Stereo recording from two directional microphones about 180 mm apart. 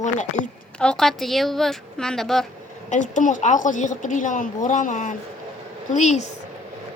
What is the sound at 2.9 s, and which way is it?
A woman's voice, 45° left (ahead or behind).